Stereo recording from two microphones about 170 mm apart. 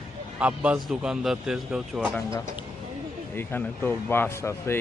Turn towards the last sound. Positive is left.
turn(degrees=15)  # may be behind; listen again after turning